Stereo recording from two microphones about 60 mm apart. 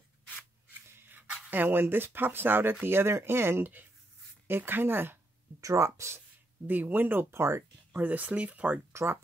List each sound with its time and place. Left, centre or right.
0.7 s a sound: right
1.5 s speech: right
5.6 s speech: right
6.7 s speech: right
7.9 s speech: right
8.9 s speech: right